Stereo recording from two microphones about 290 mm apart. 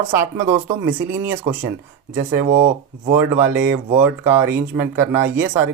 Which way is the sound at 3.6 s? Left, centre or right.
Right.